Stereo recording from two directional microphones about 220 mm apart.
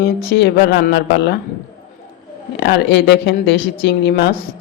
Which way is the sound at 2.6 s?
50° left (ahead or behind).